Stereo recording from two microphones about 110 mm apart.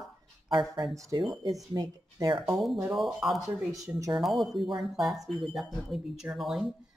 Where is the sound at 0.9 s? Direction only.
30° right (ahead or behind).